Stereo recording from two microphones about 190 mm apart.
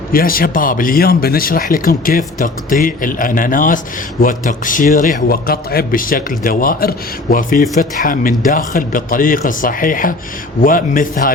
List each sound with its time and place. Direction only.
0.1 s speech: 50° left (ahead or behind)